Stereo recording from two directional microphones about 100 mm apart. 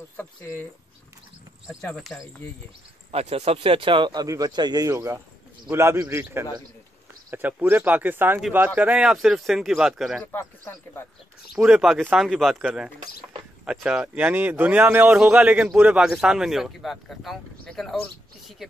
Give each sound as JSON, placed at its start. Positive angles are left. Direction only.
{"t": 0.4, "sound": "speech", "side_deg": 30}
{"t": 3.1, "sound": "speech", "side_deg": -90}
{"t": 4.1, "sound": "a man's voice", "side_deg": -40}
{"t": 4.9, "sound": "speech", "side_deg": -30}
{"t": 10.2, "sound": "speech", "side_deg": 20}
{"t": 11.6, "sound": "speech", "side_deg": -5}
{"t": 13.7, "sound": "speech", "side_deg": -10}